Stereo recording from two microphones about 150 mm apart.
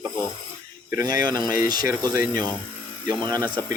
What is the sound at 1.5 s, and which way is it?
Speech, 70° left (ahead or behind).